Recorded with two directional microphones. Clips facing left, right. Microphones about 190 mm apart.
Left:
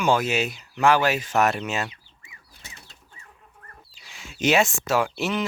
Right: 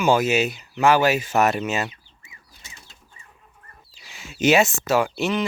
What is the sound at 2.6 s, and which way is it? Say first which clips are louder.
Bird flight: left 2 dB; 60° left (ahead or behind).